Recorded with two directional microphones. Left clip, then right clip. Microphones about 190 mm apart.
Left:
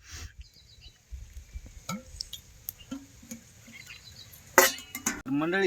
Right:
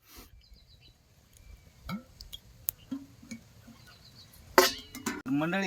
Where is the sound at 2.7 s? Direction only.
10° right (ahead or behind).